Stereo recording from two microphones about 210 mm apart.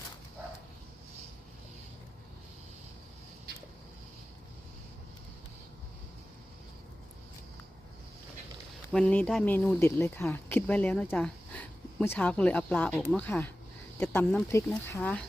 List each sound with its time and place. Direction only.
8.9 s speech: 5° left (ahead or behind)